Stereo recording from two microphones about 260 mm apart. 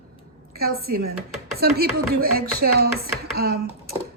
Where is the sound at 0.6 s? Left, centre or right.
Right.